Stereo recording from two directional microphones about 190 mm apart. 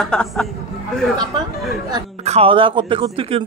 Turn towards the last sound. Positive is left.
turn(degrees=-30)  # may be behind; listen again after turning